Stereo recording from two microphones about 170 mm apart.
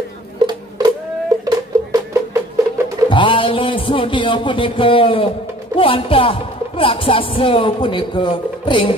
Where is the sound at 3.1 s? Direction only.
30° left (ahead or behind).